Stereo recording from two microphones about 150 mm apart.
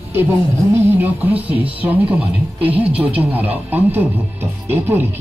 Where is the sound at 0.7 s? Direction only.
15° right (ahead or behind).